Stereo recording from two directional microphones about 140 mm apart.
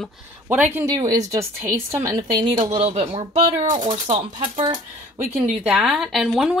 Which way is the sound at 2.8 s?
45° right (ahead or behind).